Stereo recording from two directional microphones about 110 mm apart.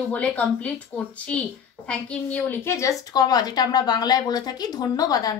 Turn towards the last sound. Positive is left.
turn(degrees=35)  # may be behind; listen again after turning